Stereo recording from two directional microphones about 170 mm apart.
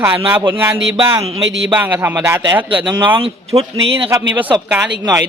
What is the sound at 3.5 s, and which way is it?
A man's voice, 20° right (ahead or behind).